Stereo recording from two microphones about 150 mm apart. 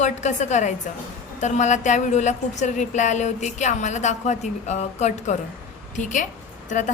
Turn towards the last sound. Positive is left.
turn(degrees=55)  # may be behind; listen again after turning